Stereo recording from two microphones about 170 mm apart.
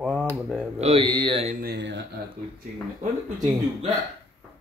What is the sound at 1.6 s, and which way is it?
Speech, 75° right (ahead or behind).